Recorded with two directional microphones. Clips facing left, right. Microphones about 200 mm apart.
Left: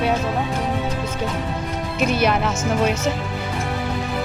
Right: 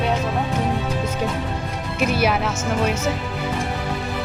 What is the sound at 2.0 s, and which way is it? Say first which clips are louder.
Speech: left 1 dB; 5° right (ahead or behind).